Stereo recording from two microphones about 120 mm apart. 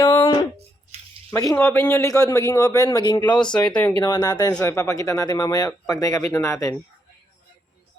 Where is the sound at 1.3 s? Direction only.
25° left (ahead or behind).